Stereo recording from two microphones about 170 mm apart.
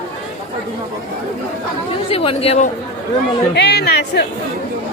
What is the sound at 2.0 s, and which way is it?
Speech, 35° left (ahead or behind).